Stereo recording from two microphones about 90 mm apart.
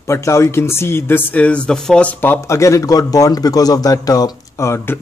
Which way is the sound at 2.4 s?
35° left (ahead or behind).